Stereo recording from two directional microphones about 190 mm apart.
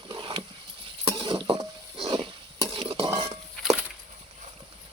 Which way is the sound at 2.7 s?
30° right (ahead or behind).